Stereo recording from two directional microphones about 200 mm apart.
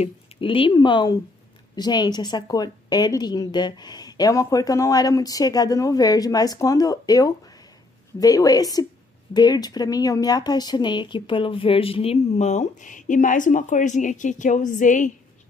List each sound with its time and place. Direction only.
0.0 s speech: 25° left (ahead or behind)